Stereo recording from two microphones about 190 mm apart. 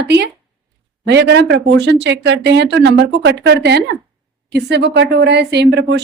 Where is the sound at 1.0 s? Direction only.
65° right (ahead or behind).